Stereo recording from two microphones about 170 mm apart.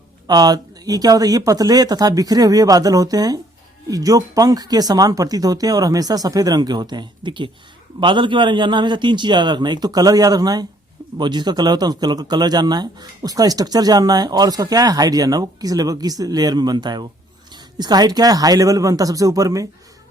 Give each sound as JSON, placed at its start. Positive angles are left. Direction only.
{"t": 0.3, "sound": "speech", "side_deg": -25}